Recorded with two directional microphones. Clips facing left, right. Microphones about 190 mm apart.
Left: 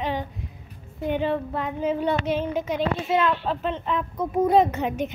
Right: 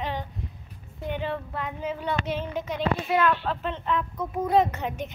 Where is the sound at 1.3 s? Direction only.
25° left (ahead or behind).